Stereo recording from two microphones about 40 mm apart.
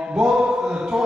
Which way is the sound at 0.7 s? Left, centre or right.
Right.